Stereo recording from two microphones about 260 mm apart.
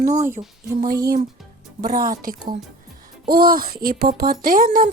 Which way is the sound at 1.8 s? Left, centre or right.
Right.